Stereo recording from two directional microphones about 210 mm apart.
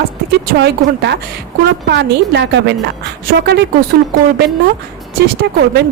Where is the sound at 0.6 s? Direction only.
55° right (ahead or behind).